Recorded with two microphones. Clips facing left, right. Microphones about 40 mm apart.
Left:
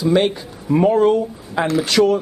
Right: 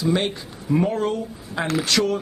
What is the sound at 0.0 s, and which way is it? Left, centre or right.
Speech, centre.